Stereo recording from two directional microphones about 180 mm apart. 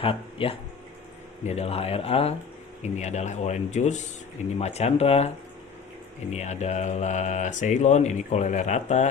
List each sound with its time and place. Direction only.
0.0 s speech: 30° left (ahead or behind)
6.3 s speech: 40° left (ahead or behind)